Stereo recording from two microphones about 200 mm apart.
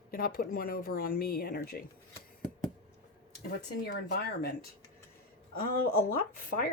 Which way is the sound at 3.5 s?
55° left (ahead or behind).